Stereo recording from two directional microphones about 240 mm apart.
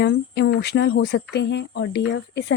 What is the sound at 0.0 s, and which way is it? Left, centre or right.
A woman's voice, left.